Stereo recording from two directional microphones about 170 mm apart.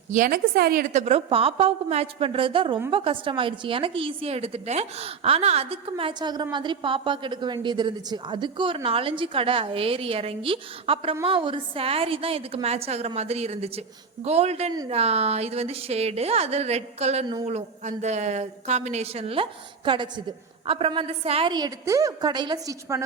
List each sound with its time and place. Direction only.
0.1 s a woman's voice: 55° right (ahead or behind)
0.9 s a woman's voice: 40° right (ahead or behind); by 23.0 s 20° right (ahead or behind)